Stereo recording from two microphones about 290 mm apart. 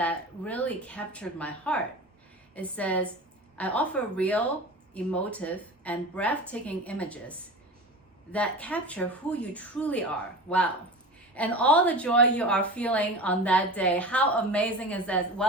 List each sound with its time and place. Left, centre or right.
0.0 s a woman's voice: centre
10.5 s speech: left
11.3 s a woman's voice: centre